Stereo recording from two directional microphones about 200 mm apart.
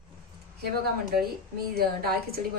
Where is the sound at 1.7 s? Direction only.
50° right (ahead or behind).